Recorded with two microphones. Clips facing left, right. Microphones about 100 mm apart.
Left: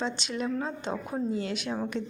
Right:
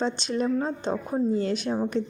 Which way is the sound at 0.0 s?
40° right (ahead or behind).